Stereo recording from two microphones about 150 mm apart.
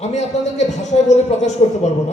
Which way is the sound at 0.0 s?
50° left (ahead or behind).